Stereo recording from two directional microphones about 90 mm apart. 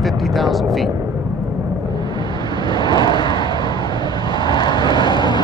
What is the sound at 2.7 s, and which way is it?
Vehicle, 55° left (ahead or behind).